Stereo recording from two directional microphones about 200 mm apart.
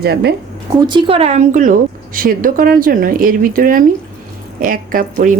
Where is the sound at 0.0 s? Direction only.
55° right (ahead or behind).